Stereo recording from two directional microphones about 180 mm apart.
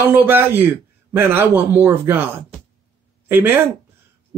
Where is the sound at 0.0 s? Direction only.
10° right (ahead or behind).